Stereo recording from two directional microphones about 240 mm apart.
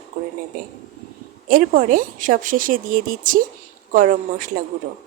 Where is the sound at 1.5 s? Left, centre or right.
Right.